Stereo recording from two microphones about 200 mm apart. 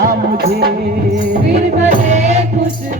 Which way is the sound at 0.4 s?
50° right (ahead or behind).